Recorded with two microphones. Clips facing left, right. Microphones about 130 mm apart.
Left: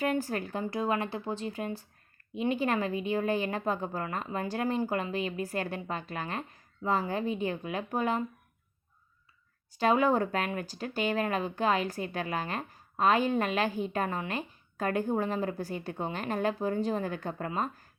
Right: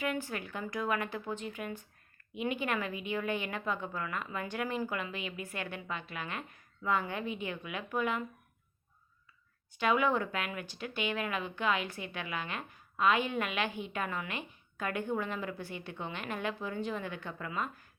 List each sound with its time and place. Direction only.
0.0 s speech: 40° left (ahead or behind)
9.7 s speech: 35° left (ahead or behind)